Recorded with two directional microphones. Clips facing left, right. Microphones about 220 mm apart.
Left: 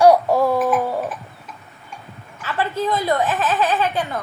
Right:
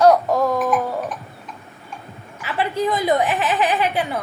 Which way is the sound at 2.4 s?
15° right (ahead or behind).